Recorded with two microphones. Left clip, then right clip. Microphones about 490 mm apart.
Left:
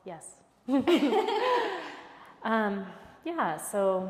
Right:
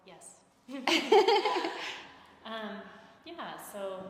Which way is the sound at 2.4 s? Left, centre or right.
Left.